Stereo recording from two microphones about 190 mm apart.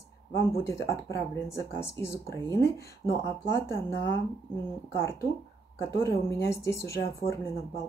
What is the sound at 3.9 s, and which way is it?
Speech, 60° left (ahead or behind).